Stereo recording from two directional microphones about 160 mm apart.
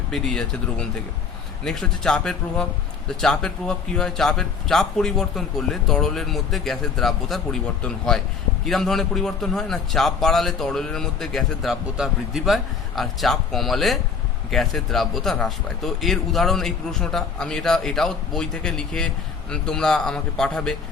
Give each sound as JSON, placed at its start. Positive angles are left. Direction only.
{"t": 0.1, "sound": "speech", "side_deg": 5}